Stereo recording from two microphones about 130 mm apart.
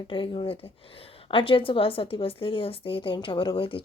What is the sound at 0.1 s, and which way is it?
A woman's voice, 45° left (ahead or behind).